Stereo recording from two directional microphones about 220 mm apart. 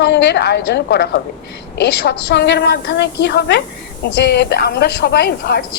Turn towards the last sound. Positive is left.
turn(degrees=50)  # may be behind; listen again after turning